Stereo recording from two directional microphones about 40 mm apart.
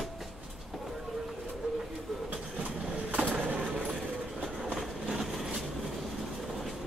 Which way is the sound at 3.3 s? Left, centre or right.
Right.